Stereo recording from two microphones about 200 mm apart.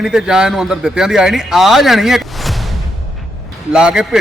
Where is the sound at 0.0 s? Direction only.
5° right (ahead or behind).